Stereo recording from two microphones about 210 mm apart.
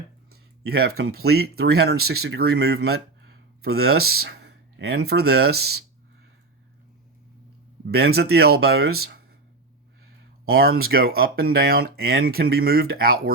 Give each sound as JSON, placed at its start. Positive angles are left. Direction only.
{"t": 0.7, "sound": "speech", "side_deg": -50}
{"t": 2.0, "sound": "speech", "side_deg": -90}
{"t": 2.6, "sound": "speech", "side_deg": -50}
{"t": 3.8, "sound": "speech", "side_deg": -90}
{"t": 4.1, "sound": "speech", "side_deg": -50}
{"t": 7.9, "sound": "speech", "side_deg": -50}
{"t": 10.4, "sound": "speech", "side_deg": -45}